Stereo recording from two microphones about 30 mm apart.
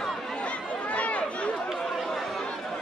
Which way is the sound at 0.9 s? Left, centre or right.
Left.